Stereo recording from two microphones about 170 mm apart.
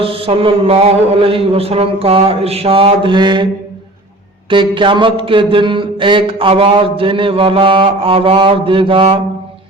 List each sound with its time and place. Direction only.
0.0 s mantra: 35° right (ahead or behind)